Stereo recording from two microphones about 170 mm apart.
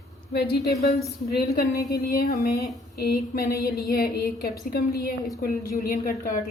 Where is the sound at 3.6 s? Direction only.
65° left (ahead or behind).